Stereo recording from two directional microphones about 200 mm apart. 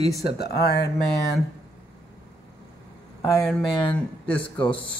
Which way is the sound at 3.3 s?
5° left (ahead or behind).